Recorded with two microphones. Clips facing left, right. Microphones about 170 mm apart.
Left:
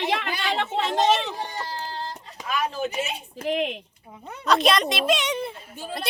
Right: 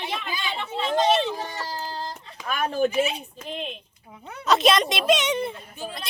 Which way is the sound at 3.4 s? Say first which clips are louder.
Left 11 dB; 75° left (ahead or behind).